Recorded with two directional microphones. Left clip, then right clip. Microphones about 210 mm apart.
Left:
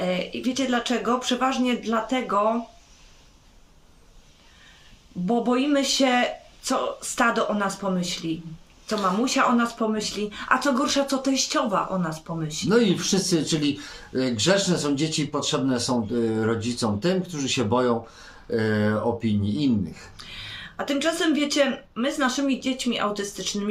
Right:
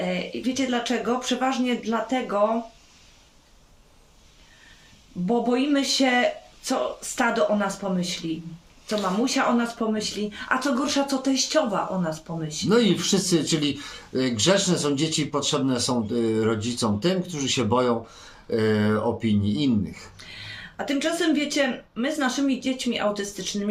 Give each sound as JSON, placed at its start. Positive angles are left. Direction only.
{"t": 0.0, "sound": "speech", "side_deg": 15}
{"t": 5.2, "sound": "speech", "side_deg": 15}
{"t": 7.8, "sound": "speech", "side_deg": 15}
{"t": 12.6, "sound": "speech", "side_deg": -10}
{"t": 20.7, "sound": "speech", "side_deg": 15}